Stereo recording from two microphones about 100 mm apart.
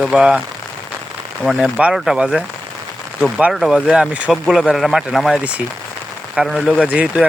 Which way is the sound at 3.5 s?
5° right (ahead or behind).